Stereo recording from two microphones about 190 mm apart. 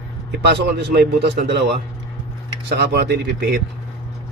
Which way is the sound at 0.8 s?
60° right (ahead or behind).